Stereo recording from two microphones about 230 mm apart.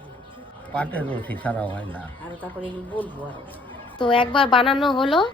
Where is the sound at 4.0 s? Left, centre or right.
Left.